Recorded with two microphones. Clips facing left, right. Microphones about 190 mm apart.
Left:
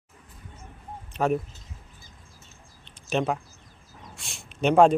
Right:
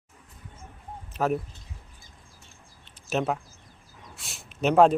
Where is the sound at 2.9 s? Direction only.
5° right (ahead or behind).